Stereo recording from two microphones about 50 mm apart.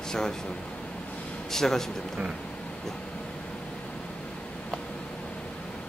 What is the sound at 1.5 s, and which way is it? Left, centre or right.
Speech, centre.